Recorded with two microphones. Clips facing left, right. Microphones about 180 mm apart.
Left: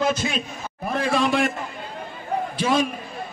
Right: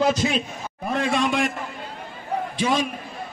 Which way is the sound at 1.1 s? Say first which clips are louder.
Left 3 dB; centre (ahead or behind).